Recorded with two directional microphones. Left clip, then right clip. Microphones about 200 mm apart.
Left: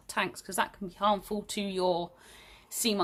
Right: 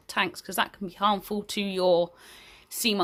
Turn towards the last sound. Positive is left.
turn(degrees=-30)  # may be behind; listen again after turning